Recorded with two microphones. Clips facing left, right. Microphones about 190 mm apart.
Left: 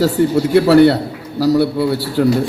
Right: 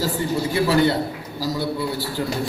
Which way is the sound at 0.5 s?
75° left (ahead or behind).